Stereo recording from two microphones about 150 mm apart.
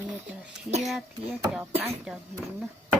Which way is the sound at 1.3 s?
10° right (ahead or behind).